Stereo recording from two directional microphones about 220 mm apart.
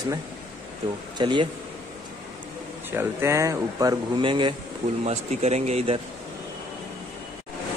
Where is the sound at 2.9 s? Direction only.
10° right (ahead or behind); by 6.0 s 25° right (ahead or behind).